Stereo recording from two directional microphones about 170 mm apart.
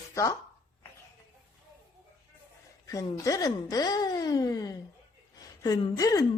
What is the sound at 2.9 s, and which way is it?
A woman's voice, 20° left (ahead or behind).